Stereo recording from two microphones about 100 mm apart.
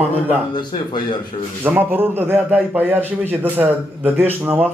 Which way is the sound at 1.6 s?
20° right (ahead or behind).